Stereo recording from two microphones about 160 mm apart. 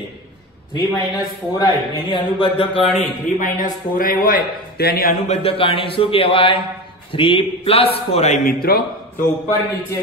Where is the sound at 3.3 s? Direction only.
55° left (ahead or behind); by 5.1 s 70° left (ahead or behind).